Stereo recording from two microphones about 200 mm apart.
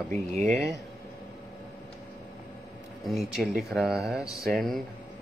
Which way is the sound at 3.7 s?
Centre (ahead or behind).